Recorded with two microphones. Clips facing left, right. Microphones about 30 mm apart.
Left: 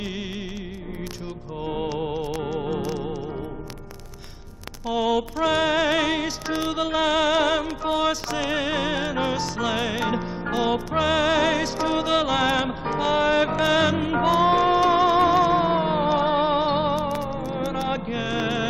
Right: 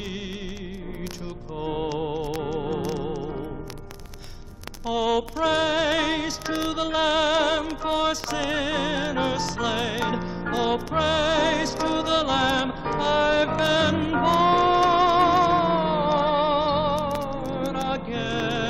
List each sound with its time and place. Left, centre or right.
1.6 s music: centre
5.1 s music: centre
14.4 s music: centre